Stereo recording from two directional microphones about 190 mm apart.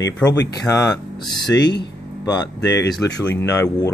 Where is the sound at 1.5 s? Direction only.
65° left (ahead or behind).